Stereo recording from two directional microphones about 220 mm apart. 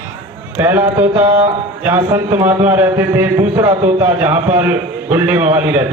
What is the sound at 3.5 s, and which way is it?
Speech, 20° right (ahead or behind).